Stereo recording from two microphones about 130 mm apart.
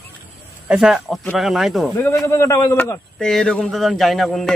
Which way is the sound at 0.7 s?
5° right (ahead or behind).